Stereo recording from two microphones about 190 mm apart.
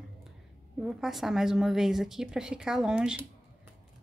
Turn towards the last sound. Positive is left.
turn(degrees=-5)  # may be behind; listen again after turning